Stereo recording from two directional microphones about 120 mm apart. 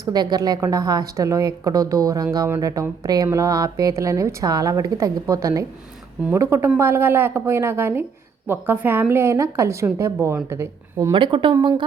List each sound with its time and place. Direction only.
0.0 s a woman's voice: 35° right (ahead or behind)
11.1 s speech: 45° right (ahead or behind)